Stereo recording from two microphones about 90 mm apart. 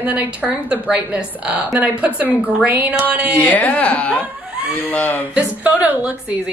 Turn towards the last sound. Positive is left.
turn(degrees=-15)  # may be behind; listen again after turning